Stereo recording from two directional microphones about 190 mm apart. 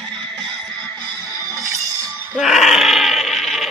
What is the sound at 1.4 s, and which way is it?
Music, 15° right (ahead or behind).